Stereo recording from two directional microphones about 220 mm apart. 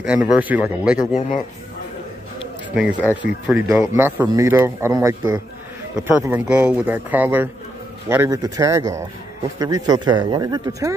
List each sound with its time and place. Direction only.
0.0 s speech: 5° right (ahead or behind)
0.9 s speech: 35° left (ahead or behind)
2.7 s a man's voice: 5° right (ahead or behind)